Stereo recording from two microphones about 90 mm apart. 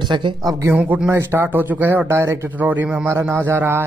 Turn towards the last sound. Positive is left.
turn(degrees=-25)  # may be behind; listen again after turning